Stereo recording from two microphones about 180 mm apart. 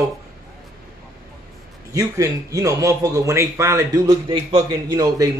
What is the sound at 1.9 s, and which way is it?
A man's voice, 20° right (ahead or behind).